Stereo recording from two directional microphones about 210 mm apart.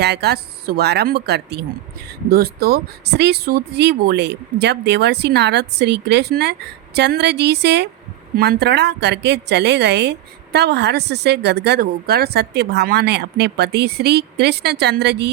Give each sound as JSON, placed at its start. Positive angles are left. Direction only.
{"t": 0.0, "sound": "a woman's voice", "side_deg": -50}